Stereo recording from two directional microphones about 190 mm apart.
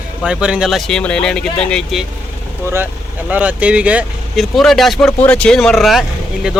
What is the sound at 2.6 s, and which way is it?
Speech, 15° right (ahead or behind).